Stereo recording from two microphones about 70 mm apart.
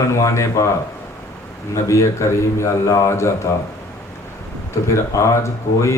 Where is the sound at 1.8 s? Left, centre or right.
Left.